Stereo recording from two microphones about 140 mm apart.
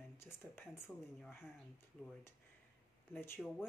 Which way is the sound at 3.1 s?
15° left (ahead or behind).